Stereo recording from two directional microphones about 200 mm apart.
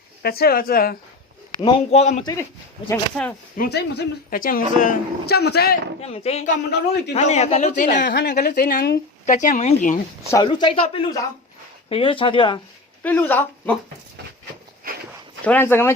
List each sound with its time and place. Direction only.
0.2 s speech: 50° left (ahead or behind)
1.6 s speech: 35° left (ahead or behind)
2.9 s speech: 10° left (ahead or behind)
3.6 s speech: 55° left (ahead or behind)
6.0 s speech: 30° left (ahead or behind)
8.0 s speech: 55° left (ahead or behind); by 10.0 s 40° left (ahead or behind)
10.3 s speech: 20° left (ahead or behind)
13.0 s speech: 10° left (ahead or behind)
15.4 s speech: 10° left (ahead or behind)